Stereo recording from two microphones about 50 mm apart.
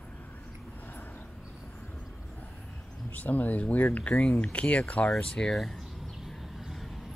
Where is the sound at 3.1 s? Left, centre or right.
Left.